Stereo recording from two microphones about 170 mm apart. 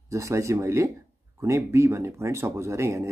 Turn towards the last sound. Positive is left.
turn(degrees=-15)  # may be behind; listen again after turning